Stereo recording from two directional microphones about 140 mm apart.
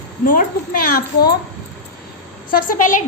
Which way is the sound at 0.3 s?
80° left.